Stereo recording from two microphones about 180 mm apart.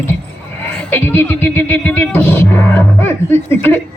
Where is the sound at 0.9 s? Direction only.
10° left (ahead or behind).